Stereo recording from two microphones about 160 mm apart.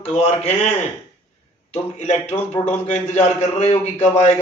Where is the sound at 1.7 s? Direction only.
40° left (ahead or behind).